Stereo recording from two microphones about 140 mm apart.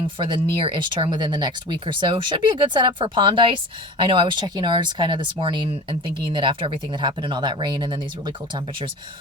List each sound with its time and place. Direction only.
0.2 s speech: 35° right (ahead or behind)